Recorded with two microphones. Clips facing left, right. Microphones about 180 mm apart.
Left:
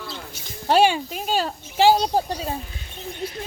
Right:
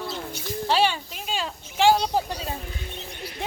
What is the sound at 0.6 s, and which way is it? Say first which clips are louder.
Speech: left 5 dB; 50° left (ahead or behind).